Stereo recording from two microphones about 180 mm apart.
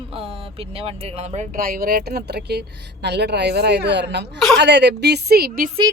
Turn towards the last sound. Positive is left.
turn(degrees=-55)  # may be behind; listen again after turning